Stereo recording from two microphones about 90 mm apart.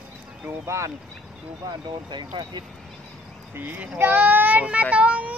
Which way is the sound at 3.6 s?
20° right (ahead or behind).